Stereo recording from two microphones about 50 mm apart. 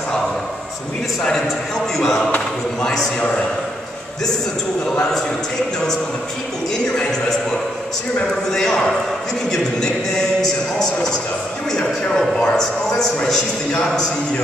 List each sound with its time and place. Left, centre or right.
2.0 s speech: centre
3.2 s a man's voice: centre
7.0 s a man's voice: centre
8.5 s a man's voice: centre